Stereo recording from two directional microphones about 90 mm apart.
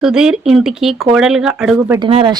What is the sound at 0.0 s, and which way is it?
Speech, 5° right (ahead or behind).